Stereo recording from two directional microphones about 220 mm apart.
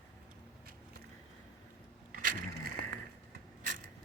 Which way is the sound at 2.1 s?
40° right (ahead or behind).